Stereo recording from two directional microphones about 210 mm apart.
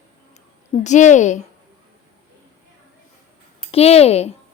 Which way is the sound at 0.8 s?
35° left (ahead or behind).